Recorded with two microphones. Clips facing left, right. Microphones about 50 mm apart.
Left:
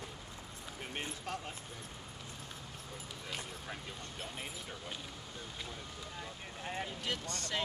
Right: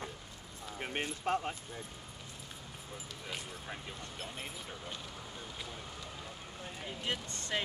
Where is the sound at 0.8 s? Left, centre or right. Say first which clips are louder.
Right 5 dB; right.